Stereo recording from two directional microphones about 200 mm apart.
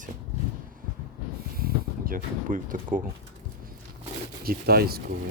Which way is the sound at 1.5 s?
45° right (ahead or behind).